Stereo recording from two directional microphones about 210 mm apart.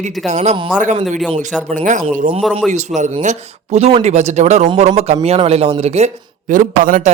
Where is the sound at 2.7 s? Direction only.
35° right (ahead or behind).